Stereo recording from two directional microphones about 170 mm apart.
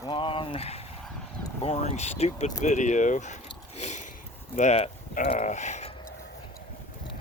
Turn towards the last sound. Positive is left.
turn(degrees=40)  # may be behind; listen again after turning